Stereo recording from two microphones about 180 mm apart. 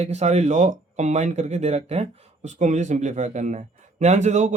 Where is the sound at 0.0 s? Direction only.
40° right (ahead or behind).